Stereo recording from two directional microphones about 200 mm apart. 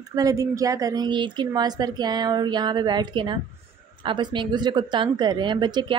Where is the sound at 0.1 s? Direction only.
15° right (ahead or behind).